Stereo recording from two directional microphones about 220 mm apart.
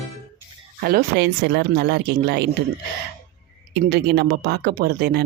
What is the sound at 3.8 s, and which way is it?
Speech, 50° right (ahead or behind).